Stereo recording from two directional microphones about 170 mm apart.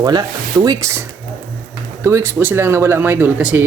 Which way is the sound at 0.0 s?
25° right (ahead or behind).